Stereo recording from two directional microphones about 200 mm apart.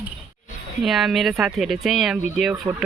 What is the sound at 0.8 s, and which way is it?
Speech, centre (ahead or behind).